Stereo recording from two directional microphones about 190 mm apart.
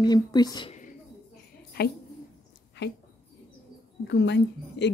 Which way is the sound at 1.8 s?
55° left (ahead or behind).